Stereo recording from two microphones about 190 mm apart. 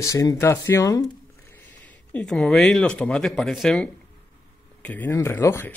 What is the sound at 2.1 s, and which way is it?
Speech, 5° left (ahead or behind).